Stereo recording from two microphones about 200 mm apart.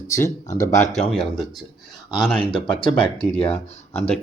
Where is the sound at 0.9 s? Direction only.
Centre (ahead or behind).